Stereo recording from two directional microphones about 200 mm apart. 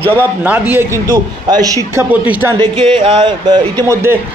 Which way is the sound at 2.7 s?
25° right (ahead or behind).